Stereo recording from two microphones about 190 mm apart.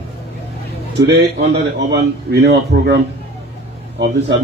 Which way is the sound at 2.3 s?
60° right (ahead or behind).